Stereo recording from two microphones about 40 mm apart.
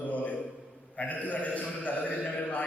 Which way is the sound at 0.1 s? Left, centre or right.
Left.